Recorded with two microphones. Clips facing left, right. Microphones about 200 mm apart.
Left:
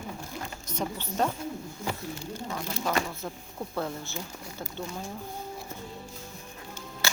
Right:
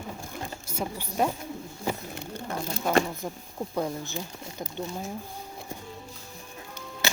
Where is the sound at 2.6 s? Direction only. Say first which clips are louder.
Right 5 dB; 30° right (ahead or behind).